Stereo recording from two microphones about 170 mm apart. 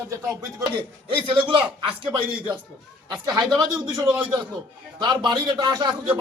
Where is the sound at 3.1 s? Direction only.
25° right (ahead or behind).